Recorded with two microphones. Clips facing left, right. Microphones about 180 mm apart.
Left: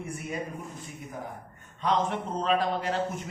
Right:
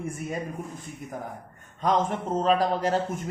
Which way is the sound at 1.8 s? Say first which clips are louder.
Right 2 dB; 45° right (ahead or behind).